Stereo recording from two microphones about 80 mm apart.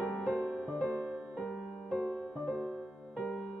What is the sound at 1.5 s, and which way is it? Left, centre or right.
Music, centre.